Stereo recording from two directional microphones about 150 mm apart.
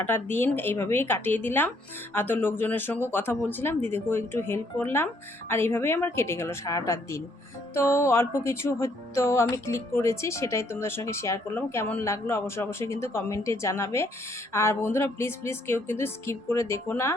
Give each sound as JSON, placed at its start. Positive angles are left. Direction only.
{"t": 0.0, "sound": "speech", "side_deg": 15}
{"t": 7.7, "sound": "music", "side_deg": 15}
{"t": 14.5, "sound": "speech", "side_deg": 20}